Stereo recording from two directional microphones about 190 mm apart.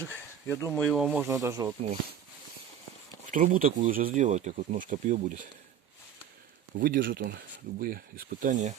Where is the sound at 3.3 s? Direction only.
45° right (ahead or behind).